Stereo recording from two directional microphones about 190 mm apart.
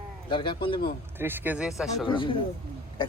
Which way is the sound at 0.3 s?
25° left (ahead or behind).